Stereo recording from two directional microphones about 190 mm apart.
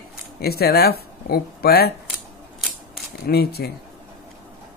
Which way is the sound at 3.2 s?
55° left (ahead or behind).